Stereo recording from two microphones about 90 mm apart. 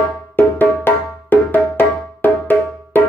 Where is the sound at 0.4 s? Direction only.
25° left (ahead or behind).